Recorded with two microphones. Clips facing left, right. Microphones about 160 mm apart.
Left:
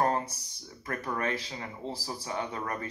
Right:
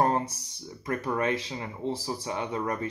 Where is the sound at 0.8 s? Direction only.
25° right (ahead or behind).